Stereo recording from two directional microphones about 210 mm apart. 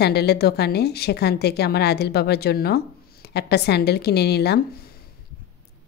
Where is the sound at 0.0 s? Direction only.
50° left (ahead or behind).